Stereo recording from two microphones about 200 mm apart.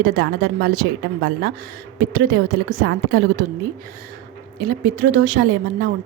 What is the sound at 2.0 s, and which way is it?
A woman's voice, 50° right (ahead or behind).